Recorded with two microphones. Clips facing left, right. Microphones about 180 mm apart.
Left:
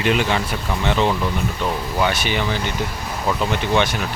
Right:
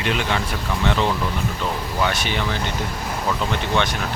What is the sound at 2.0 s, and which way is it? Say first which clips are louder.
Speech: left 2 dB; 5° left (ahead or behind).